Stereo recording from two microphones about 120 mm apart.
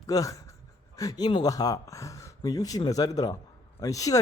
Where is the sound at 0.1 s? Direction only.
30° left (ahead or behind).